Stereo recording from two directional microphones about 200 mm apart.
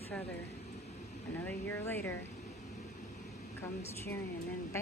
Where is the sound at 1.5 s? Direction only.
10° left (ahead or behind).